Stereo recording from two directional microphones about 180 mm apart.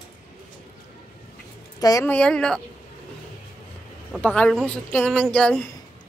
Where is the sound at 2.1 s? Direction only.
5° left (ahead or behind).